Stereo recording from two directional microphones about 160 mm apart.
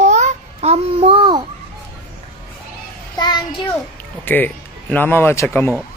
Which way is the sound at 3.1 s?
25° left (ahead or behind).